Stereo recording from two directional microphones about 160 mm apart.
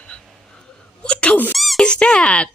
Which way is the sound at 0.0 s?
5° left (ahead or behind).